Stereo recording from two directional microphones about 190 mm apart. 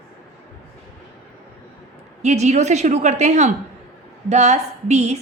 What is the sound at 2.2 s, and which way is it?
A woman's voice, 35° right (ahead or behind).